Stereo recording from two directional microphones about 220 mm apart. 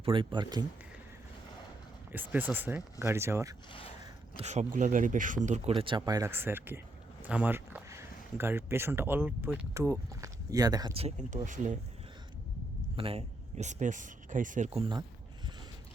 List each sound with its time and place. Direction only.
0.0 s speech: 25° right (ahead or behind)
2.1 s speech: 10° right (ahead or behind)
3.7 s speech: 25° left (ahead or behind)
4.0 s speech: 30° right (ahead or behind)
13.0 s speech: 25° right (ahead or behind)